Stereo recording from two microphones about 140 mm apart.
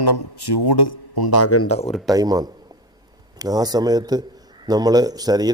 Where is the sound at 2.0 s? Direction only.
25° right (ahead or behind).